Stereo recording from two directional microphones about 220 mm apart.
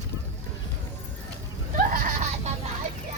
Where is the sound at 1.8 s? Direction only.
40° right (ahead or behind).